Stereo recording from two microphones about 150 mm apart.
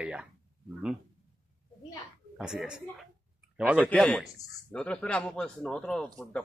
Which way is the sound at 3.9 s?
5° left (ahead or behind).